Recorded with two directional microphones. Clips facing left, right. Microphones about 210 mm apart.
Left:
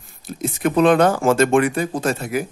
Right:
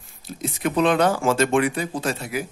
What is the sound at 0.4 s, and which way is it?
Speech, 50° left (ahead or behind).